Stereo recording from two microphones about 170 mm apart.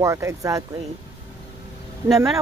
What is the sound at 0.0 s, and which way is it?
Speech, 15° right (ahead or behind).